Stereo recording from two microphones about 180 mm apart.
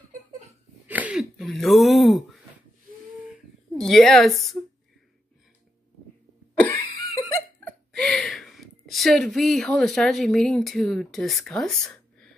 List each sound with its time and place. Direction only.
0.8 s a sound: 10° right (ahead or behind)
3.8 s a woman's voice: centre (ahead or behind)
6.5 s cough: 10° left (ahead or behind)
7.6 s a woman's voice: 5° left (ahead or behind)